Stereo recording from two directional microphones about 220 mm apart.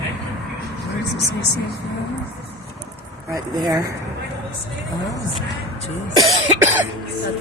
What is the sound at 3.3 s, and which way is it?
Cough, 20° right (ahead or behind).